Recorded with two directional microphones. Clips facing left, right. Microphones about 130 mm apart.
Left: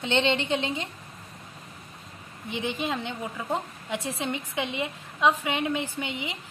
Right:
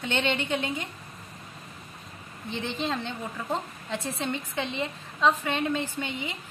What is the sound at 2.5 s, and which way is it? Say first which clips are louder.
A woman's voice: left 1 dB; 15° left (ahead or behind).